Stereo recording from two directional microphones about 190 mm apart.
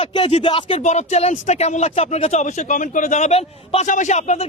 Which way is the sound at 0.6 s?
35° left (ahead or behind).